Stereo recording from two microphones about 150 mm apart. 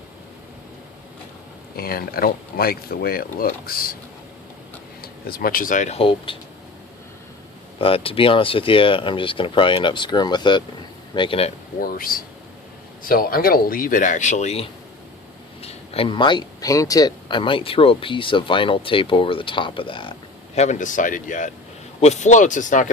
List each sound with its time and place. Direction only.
1.7 s speech: 90° left
5.2 s speech: 85° left; by 6.0 s 55° left (ahead or behind)
6.0 s speech: 35° left (ahead or behind)
7.8 s speech: 40° left (ahead or behind)
11.8 s speech: 75° left (ahead or behind); by 20.1 s 35° left (ahead or behind)
20.6 s speech: 55° left (ahead or behind)